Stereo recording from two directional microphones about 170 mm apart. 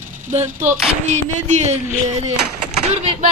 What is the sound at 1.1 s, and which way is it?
Speech, 45° right (ahead or behind).